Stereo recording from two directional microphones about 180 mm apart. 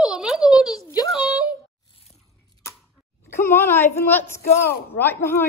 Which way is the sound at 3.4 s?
15° left (ahead or behind).